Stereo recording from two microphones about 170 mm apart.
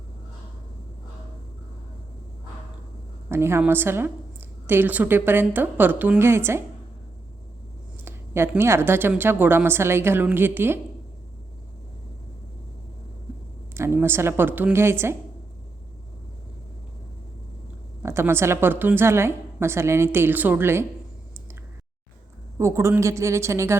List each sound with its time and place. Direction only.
3.2 s a woman's voice: 15° right (ahead or behind)
8.0 s a woman's voice: 15° right (ahead or behind)
13.7 s a woman's voice: 15° right (ahead or behind)
18.0 s a woman's voice: 15° right (ahead or behind)
22.5 s a woman's voice: 15° right (ahead or behind)